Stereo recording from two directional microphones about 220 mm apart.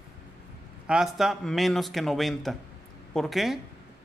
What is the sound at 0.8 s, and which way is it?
A man's voice, 5° right (ahead or behind).